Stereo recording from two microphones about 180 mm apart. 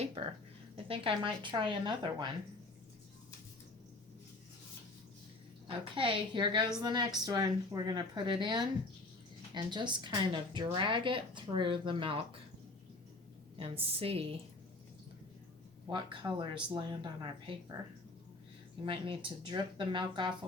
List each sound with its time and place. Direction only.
0.0 s speech: 35° right (ahead or behind)
5.6 s speech: 30° right (ahead or behind)
13.6 s a woman's voice: 35° right (ahead or behind)
15.9 s speech: 25° right (ahead or behind)
18.9 s speech: 30° right (ahead or behind)